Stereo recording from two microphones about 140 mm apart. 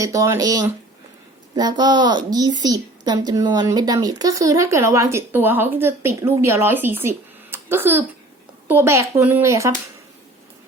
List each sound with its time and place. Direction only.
0.0 s a woman's voice: 25° right (ahead or behind)